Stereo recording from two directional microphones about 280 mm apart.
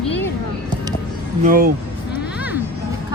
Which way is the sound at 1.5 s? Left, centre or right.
Right.